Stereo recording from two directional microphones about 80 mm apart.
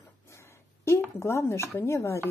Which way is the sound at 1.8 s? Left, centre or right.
Left.